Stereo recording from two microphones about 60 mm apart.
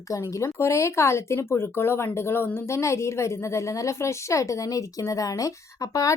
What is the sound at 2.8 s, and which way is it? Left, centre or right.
Speech, left.